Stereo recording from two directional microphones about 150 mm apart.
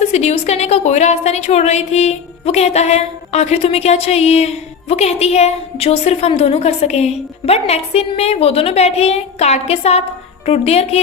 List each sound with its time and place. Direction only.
0.1 s a woman's voice: 45° left (ahead or behind)